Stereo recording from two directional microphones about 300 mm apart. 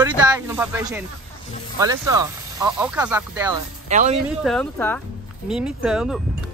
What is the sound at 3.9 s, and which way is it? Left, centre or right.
Speech, right.